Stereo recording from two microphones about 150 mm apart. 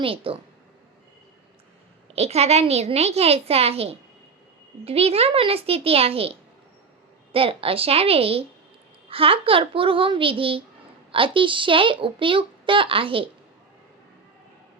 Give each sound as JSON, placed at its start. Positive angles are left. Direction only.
{"t": 0.0, "sound": "a child's voice", "side_deg": -35}
{"t": 2.1, "sound": "a woman's voice", "side_deg": -45}
{"t": 7.3, "sound": "a child's voice", "side_deg": -40}